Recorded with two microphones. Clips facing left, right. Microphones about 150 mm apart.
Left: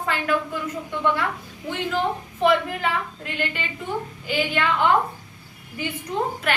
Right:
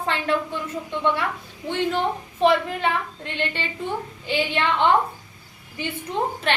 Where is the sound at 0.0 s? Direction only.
25° right (ahead or behind).